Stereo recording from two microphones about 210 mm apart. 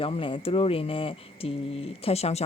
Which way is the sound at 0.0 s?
25° left (ahead or behind).